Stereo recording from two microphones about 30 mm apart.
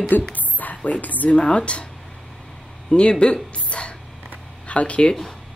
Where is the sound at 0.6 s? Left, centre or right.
Left.